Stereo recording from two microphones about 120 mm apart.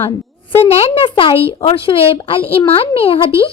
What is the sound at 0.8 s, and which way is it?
Speech, 50° left (ahead or behind).